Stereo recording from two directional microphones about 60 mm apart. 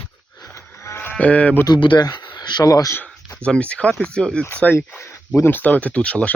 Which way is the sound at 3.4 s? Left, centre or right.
Centre.